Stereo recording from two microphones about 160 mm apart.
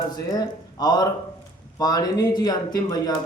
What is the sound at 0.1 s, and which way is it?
Speech, 25° left (ahead or behind).